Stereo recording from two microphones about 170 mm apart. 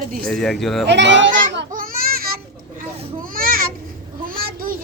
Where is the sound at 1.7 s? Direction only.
55° right (ahead or behind).